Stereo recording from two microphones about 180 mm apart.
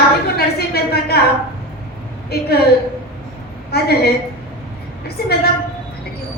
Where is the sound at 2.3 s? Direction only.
60° left (ahead or behind).